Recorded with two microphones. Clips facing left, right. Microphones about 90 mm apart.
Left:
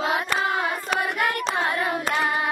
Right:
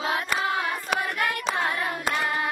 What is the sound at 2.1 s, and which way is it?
Hands, 25° left (ahead or behind).